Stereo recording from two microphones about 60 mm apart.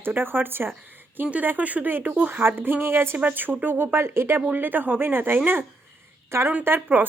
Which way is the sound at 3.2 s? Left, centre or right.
Right.